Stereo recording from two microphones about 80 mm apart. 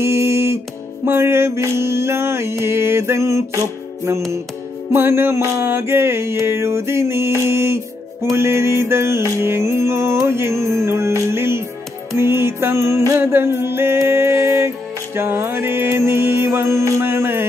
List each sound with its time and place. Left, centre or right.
0.0 s music: right